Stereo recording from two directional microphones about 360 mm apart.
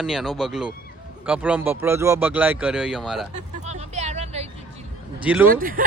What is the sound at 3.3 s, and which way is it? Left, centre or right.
Vehicle, centre.